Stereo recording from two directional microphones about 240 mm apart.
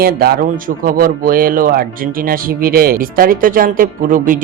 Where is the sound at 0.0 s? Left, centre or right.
Right.